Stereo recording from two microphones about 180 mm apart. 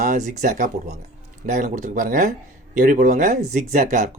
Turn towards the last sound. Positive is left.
turn(degrees=-45)  # may be behind; listen again after turning